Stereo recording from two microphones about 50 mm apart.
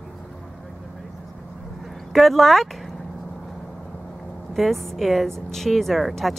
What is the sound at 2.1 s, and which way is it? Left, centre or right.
Speech, centre.